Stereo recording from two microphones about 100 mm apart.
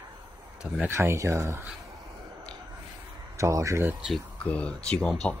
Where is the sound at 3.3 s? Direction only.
30° right (ahead or behind).